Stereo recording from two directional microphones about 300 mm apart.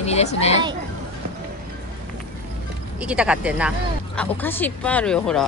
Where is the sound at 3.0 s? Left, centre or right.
Centre.